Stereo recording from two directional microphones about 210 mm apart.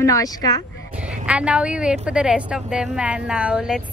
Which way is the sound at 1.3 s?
5° right (ahead or behind).